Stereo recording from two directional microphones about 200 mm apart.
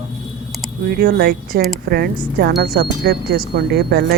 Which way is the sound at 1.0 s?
50° right (ahead or behind).